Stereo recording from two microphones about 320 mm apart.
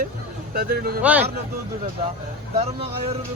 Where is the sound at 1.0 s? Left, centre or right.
Centre.